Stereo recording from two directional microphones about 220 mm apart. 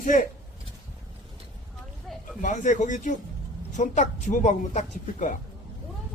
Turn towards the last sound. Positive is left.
turn(degrees=35)  # may be behind; listen again after turning